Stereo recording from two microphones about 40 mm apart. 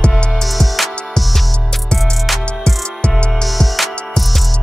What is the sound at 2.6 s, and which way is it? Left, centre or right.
Music, left.